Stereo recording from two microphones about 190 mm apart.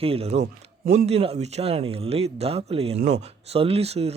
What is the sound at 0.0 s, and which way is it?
Speech, 30° right (ahead or behind).